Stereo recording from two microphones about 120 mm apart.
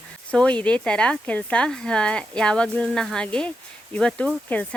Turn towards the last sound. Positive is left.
turn(degrees=10)  # may be behind; listen again after turning